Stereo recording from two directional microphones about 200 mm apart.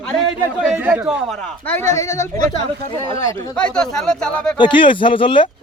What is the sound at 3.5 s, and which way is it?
Speech, 5° left (ahead or behind).